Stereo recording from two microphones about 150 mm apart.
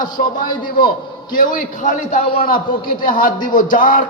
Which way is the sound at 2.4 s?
75° left (ahead or behind).